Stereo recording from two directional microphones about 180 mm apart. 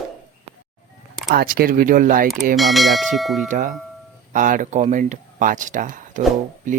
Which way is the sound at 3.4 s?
45° right (ahead or behind).